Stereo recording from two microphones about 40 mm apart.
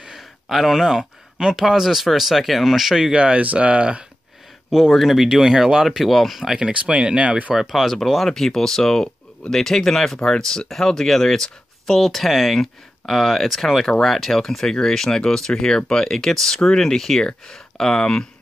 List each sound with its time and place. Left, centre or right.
0.0 s speech: centre
3.1 s speech: right
4.6 s speech: centre
5.9 s speech: centre
6.5 s speech: right
7.5 s speech: centre